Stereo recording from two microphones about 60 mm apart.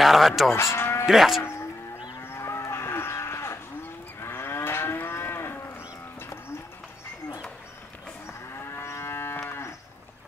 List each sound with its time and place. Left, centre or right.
0.0 s moo: centre
0.5 s livestock: left
1.0 s speech: centre
2.3 s moo: left
8.3 s moo: left